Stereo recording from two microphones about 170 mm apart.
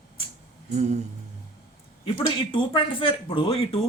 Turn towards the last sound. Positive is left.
turn(degrees=35)  # may be behind; listen again after turning